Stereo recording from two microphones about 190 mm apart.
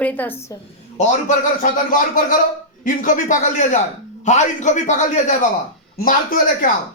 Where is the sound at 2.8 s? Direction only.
45° left (ahead or behind).